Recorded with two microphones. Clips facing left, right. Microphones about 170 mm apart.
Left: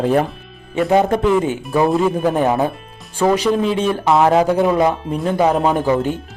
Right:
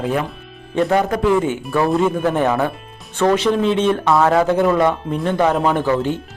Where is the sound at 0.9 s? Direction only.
25° left (ahead or behind).